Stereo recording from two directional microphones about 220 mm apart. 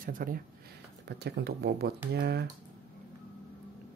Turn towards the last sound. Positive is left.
turn(degrees=-45)  # may be behind; listen again after turning